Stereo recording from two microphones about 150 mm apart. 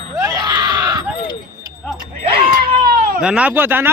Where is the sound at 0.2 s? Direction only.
25° right (ahead or behind).